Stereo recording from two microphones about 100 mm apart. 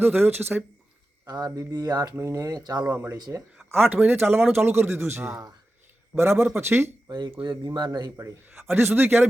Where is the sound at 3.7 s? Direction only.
20° right (ahead or behind).